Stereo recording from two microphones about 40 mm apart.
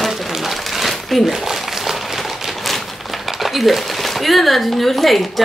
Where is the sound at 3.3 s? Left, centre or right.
Centre.